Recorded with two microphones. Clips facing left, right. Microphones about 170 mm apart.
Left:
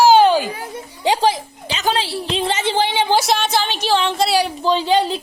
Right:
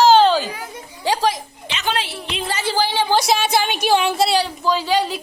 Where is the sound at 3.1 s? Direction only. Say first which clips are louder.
Right 2 dB; centre (ahead or behind).